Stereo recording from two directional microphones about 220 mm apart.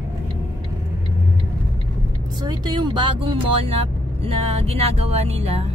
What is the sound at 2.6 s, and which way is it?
Speech, 20° right (ahead or behind).